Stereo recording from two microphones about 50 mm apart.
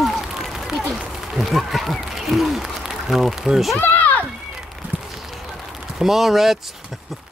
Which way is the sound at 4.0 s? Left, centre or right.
Left.